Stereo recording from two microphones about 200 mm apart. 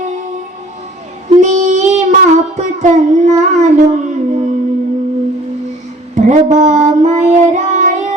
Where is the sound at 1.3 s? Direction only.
35° right (ahead or behind).